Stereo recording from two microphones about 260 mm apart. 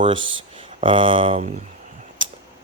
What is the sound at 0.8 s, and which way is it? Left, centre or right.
Speech, centre.